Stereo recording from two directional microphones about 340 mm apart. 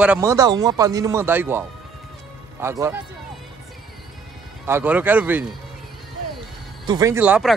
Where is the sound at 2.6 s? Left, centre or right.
Centre.